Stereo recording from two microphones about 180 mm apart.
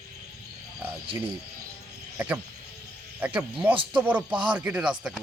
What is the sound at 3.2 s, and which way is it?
Speech, 10° right (ahead or behind).